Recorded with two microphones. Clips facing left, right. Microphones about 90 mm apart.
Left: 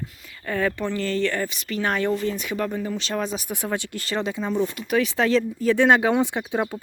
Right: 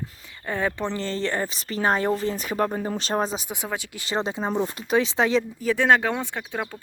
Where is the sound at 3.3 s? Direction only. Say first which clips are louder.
Left 2 dB; 20° right (ahead or behind).